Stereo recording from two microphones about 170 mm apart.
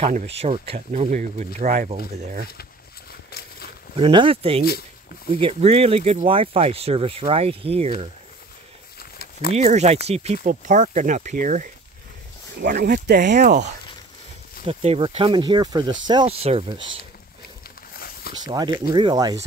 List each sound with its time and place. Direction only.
0.0 s speech: 40° right (ahead or behind)
1.9 s speech: 40° right (ahead or behind)
3.3 s a sound: 65° left (ahead or behind)
3.9 s speech: 30° right (ahead or behind)
9.5 s speech: 40° right (ahead or behind); by 13.3 s 60° right (ahead or behind)
13.3 s speech: 45° right (ahead or behind)
14.7 s speech: 35° right (ahead or behind)
17.9 s a sound: 60° left (ahead or behind)
18.4 s speech: 25° right (ahead or behind)